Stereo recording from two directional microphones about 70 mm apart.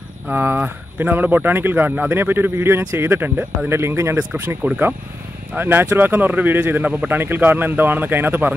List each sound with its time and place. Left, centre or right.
0.3 s speech: right